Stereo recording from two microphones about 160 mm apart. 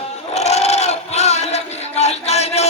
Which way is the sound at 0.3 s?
45° left (ahead or behind).